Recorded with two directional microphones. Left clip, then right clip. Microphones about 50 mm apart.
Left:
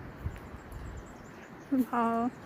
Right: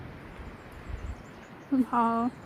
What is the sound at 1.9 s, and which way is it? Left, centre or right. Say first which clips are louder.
Speech: right 4 dB; right.